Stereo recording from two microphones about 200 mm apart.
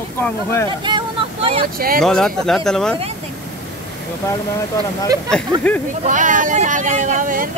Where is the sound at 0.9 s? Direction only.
25° right (ahead or behind).